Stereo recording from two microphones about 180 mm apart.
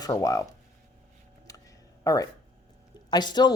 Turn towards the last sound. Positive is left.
turn(degrees=25)  # may be behind; listen again after turning